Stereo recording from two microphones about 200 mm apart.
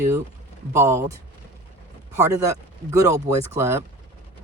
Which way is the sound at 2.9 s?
15° right (ahead or behind).